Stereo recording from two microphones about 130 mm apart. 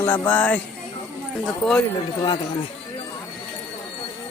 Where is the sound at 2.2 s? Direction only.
30° left (ahead or behind).